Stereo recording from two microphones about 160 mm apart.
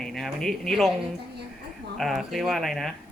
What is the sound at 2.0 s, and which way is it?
Speech, centre (ahead or behind).